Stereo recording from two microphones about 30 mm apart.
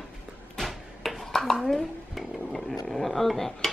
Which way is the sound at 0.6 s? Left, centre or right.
Centre.